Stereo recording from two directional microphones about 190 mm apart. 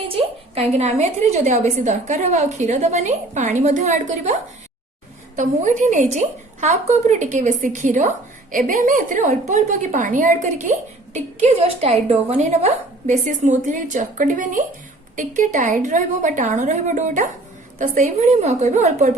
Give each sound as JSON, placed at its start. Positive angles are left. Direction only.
{"t": 0.1, "sound": "a woman's voice", "side_deg": -30}
{"t": 5.4, "sound": "a woman's voice", "side_deg": -40}